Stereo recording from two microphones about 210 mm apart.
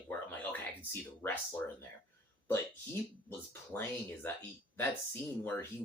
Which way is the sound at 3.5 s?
10° left (ahead or behind).